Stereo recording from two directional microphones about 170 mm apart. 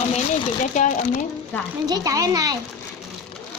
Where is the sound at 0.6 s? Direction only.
45° left (ahead or behind).